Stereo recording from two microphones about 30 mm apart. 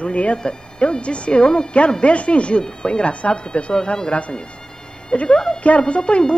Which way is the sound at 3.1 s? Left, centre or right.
Left.